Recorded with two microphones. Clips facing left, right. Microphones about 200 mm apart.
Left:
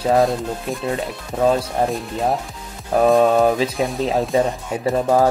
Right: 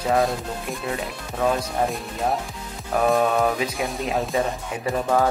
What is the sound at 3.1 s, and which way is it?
Speech, 30° left (ahead or behind).